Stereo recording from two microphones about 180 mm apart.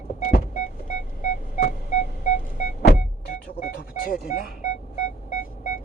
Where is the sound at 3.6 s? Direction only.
50° left (ahead or behind).